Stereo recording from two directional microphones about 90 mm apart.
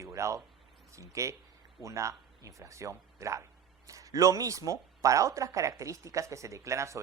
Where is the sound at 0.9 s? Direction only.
35° right (ahead or behind).